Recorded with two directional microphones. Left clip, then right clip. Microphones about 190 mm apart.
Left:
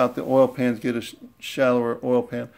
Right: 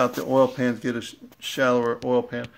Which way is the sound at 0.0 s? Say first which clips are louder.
Left 1 dB; centre (ahead or behind).